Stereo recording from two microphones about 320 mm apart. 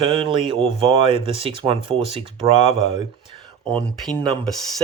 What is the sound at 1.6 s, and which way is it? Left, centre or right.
Speech, centre.